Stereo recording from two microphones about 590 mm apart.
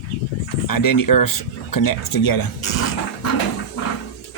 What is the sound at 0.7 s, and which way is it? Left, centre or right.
Speech, left.